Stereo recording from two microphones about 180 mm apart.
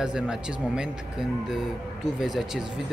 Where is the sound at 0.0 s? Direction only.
5° right (ahead or behind).